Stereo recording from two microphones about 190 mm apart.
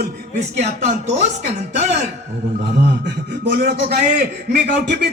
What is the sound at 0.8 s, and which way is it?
Speech, 35° right (ahead or behind).